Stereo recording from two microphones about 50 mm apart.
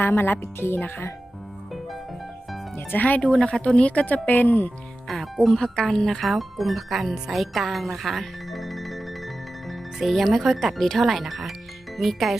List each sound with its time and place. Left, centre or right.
0.0 s speech: left
2.7 s speech: left
3.2 s speech: centre
3.6 s speech: left
4.0 s speech: left
5.0 s speech: centre